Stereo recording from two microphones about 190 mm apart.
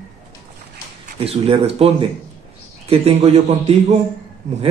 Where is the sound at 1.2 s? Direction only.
30° right (ahead or behind).